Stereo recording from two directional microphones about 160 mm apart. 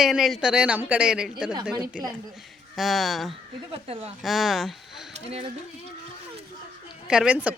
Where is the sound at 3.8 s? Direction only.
40° right (ahead or behind).